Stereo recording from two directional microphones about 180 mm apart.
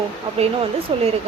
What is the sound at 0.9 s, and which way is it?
Speech, 30° right (ahead or behind).